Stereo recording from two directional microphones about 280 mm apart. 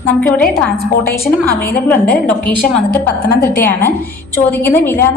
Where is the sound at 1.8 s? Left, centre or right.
Centre.